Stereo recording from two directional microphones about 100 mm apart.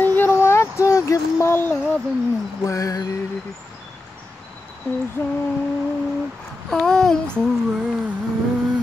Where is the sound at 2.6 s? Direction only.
35° left (ahead or behind).